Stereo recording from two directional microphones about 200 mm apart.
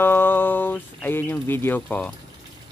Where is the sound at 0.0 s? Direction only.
10° left (ahead or behind).